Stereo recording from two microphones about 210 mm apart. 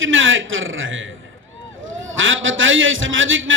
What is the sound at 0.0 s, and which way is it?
A man's voice, 65° right (ahead or behind).